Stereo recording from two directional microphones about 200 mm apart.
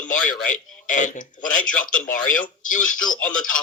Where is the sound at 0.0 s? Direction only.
40° left (ahead or behind).